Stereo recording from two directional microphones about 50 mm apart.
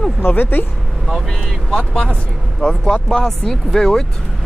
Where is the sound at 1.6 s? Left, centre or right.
Centre.